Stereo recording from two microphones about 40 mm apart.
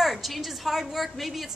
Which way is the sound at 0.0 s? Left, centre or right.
Centre.